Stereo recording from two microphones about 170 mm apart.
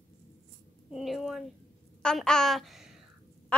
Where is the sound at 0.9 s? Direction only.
Centre (ahead or behind).